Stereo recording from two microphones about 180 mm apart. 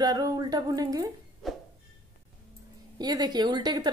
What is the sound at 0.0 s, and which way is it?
Speech, 20° right (ahead or behind).